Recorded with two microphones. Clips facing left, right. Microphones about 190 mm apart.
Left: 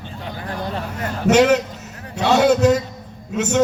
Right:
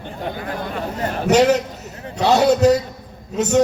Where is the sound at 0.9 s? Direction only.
30° right (ahead or behind).